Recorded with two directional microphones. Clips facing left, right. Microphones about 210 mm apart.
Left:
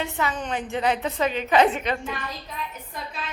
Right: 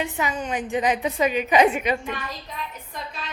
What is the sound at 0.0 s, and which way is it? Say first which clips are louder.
A woman's voice: right 1 dB; 15° right (ahead or behind).